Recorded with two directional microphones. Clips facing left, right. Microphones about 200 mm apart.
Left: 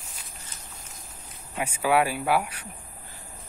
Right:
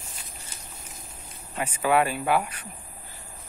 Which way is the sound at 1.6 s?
10° left (ahead or behind).